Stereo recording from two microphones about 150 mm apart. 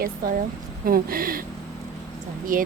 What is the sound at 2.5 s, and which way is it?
Speech, 65° right (ahead or behind).